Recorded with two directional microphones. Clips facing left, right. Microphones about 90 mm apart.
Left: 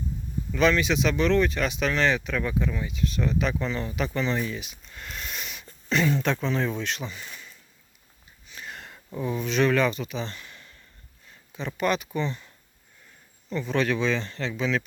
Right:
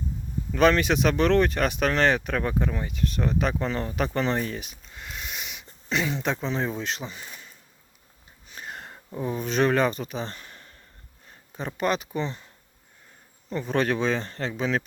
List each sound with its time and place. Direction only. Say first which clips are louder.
0.5 s speech: right 2 dB; 50° right (ahead or behind)
4.9 s speech: even; 10° right (ahead or behind); by 7.5 s 30° right (ahead or behind)
8.4 s sniff: right 2 dB; 35° right (ahead or behind)
9.1 s speech: even; 35° right (ahead or behind)
13.5 s speech: right 1 dB; 45° right (ahead or behind)